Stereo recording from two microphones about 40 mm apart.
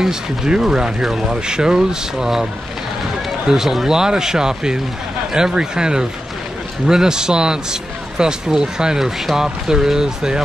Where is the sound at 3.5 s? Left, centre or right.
Centre.